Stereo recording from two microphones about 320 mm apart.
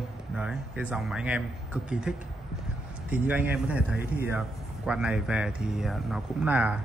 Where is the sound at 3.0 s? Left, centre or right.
Centre.